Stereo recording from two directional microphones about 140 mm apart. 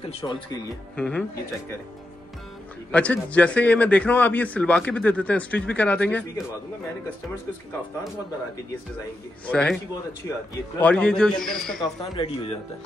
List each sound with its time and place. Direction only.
0.0 s speech: 35° left (ahead or behind)
0.9 s a man's voice: 5° left (ahead or behind)
2.9 s a man's voice: 10° left (ahead or behind)
9.5 s a man's voice: 5° left (ahead or behind)
10.8 s a man's voice: 10° left (ahead or behind)
12.0 s speech: 40° left (ahead or behind)